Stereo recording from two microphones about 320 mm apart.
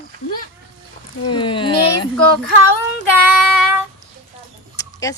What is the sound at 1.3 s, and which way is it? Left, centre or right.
Speech, centre.